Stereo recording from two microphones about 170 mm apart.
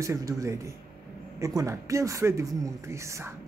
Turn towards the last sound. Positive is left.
turn(degrees=-15)  # may be behind; listen again after turning